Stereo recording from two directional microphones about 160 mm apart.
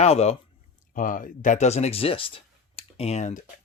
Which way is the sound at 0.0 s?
40° left (ahead or behind).